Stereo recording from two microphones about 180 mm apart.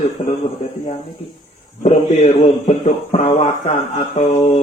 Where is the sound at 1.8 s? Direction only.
40° left (ahead or behind).